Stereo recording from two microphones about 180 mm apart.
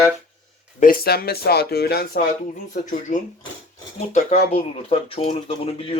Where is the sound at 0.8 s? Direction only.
55° left (ahead or behind).